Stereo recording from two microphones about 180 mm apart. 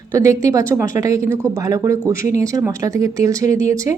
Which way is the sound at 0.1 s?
15° right (ahead or behind).